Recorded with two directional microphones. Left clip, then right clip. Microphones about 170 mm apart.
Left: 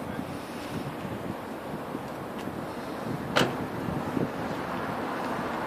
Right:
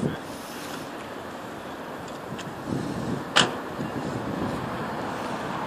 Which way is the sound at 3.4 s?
50° left (ahead or behind).